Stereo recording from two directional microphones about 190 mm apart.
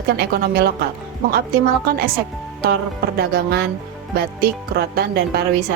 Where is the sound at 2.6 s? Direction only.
55° right (ahead or behind).